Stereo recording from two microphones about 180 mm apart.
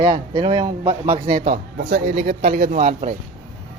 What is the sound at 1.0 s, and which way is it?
Speech, 40° right (ahead or behind).